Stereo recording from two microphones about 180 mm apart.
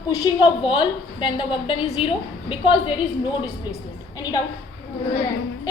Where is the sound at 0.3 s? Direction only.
30° left (ahead or behind).